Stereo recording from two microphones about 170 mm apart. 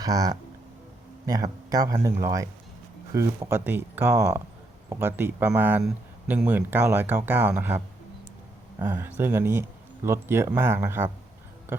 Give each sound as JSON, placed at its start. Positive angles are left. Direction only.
{"t": 0.0, "sound": "speech", "side_deg": -20}
{"t": 8.8, "sound": "speech", "side_deg": -10}